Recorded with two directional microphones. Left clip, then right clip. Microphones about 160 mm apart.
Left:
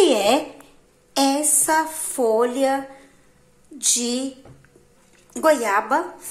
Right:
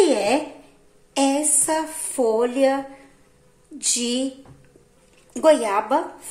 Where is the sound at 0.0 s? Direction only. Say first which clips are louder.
Left 2 dB; centre (ahead or behind).